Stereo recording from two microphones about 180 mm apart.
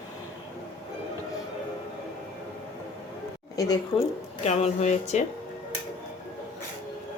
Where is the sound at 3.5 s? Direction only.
20° left (ahead or behind).